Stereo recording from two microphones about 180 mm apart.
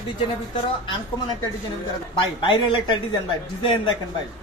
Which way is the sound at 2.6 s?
25° left (ahead or behind).